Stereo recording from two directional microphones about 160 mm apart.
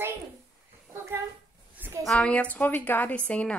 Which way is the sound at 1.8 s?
15° right (ahead or behind).